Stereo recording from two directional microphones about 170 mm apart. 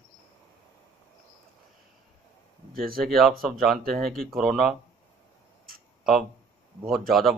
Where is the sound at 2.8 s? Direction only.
60° right (ahead or behind).